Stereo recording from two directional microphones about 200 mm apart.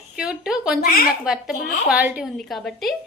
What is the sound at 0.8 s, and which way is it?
Speech, 45° left (ahead or behind).